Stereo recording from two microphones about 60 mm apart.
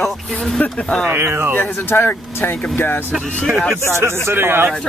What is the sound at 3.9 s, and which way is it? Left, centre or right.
Speech, right.